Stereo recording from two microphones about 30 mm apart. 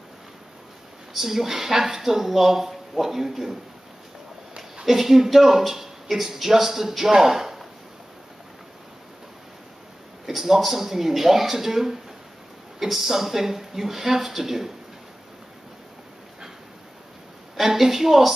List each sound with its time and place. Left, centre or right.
1.1 s speech: centre
4.8 s speech: centre
10.2 s speech: centre
17.6 s a woman's voice: centre